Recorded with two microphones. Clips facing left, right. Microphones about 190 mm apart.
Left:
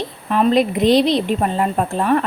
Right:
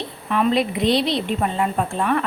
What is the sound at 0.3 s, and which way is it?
A woman's voice, 35° left (ahead or behind).